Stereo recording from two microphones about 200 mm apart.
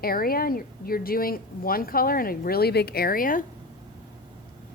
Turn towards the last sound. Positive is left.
turn(degrees=45)  # may be behind; listen again after turning